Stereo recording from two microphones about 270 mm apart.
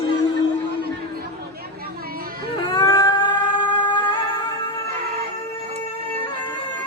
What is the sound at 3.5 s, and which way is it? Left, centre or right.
Music, centre.